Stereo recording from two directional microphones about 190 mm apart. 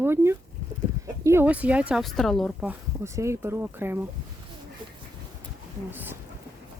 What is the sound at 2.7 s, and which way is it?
Speech, 15° right (ahead or behind).